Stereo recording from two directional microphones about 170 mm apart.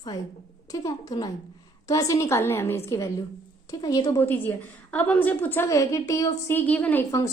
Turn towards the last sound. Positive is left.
turn(degrees=15)  # may be behind; listen again after turning